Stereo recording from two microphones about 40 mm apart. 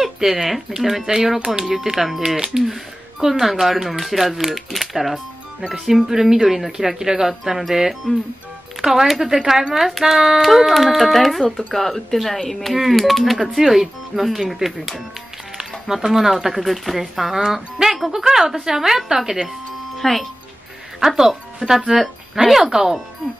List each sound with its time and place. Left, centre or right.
0.0 s speech: centre
20.0 s speech: centre